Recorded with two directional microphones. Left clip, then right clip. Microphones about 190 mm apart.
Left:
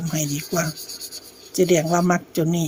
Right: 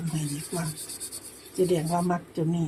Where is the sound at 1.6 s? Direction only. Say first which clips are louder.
Left 7 dB; 45° left (ahead or behind).